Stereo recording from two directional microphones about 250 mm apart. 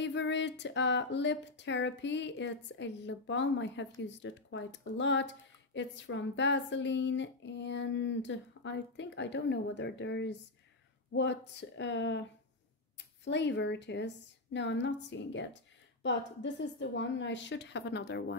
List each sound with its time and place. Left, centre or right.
0.0 s speech: left